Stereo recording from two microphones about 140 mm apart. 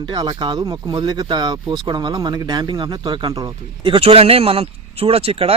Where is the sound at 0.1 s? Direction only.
30° right (ahead or behind).